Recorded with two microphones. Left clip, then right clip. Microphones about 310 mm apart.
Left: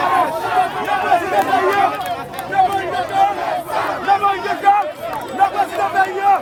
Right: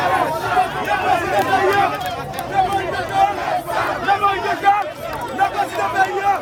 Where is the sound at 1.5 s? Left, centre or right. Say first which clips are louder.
Right 1 dB; left.